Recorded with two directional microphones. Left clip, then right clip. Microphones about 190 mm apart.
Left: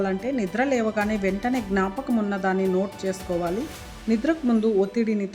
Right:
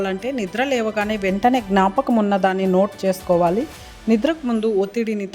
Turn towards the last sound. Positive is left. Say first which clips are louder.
# right 2 dB
turn(degrees=-45)  # may be behind; listen again after turning